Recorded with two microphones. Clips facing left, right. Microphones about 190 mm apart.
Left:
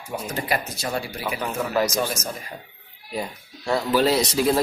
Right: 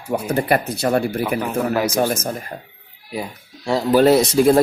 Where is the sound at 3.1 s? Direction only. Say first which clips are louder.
Right 2 dB; 10° right (ahead or behind).